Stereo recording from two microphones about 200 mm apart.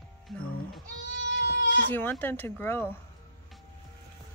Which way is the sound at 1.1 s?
65° right (ahead or behind).